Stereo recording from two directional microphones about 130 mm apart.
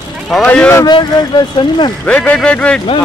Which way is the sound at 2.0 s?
10° left (ahead or behind).